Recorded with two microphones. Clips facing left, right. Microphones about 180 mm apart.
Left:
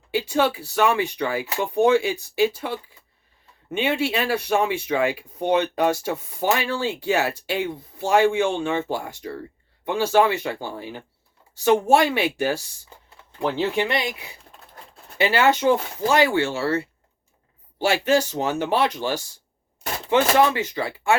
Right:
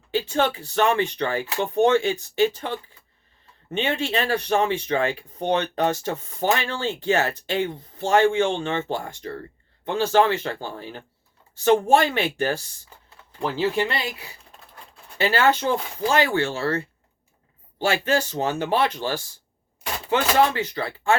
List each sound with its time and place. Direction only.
0.1 s speech: 15° left (ahead or behind)